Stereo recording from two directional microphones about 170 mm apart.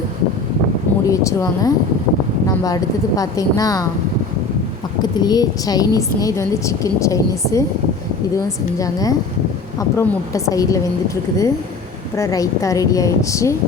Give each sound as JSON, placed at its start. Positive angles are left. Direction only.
{"t": 1.0, "sound": "a woman's voice", "side_deg": 20}
{"t": 5.1, "sound": "a woman's voice", "side_deg": 25}
{"t": 8.8, "sound": "a woman's voice", "side_deg": 20}